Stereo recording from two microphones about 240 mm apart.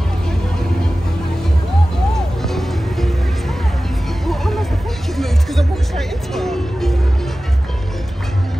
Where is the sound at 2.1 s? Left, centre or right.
Centre.